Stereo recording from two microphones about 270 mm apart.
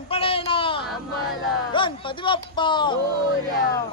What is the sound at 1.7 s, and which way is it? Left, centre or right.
A man's voice, centre.